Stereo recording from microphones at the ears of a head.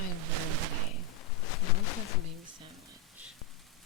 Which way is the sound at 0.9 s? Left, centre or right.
Left.